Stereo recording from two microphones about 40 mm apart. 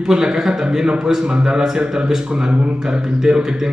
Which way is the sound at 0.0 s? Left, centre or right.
Centre.